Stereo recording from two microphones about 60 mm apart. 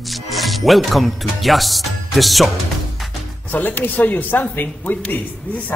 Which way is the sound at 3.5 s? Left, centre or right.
Left.